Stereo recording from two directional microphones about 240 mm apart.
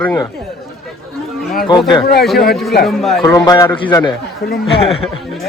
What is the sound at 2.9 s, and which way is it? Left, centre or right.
Speech, centre.